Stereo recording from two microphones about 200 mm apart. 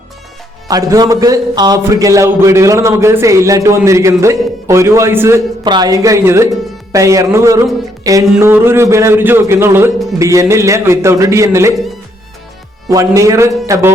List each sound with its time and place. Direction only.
0.7 s speech: 15° right (ahead or behind)
12.9 s speech: 15° right (ahead or behind)